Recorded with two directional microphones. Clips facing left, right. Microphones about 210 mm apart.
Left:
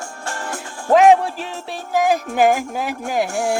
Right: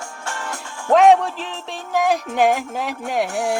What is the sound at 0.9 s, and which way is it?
Speech, 5° left (ahead or behind).